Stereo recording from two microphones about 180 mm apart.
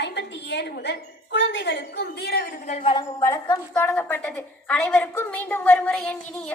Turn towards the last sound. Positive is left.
turn(degrees=5)  # may be behind; listen again after turning